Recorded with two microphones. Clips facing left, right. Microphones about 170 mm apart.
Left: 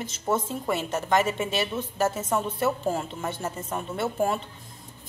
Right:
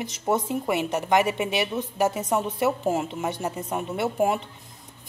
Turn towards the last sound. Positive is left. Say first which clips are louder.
# right 2 dB
turn(degrees=-15)  # may be behind; listen again after turning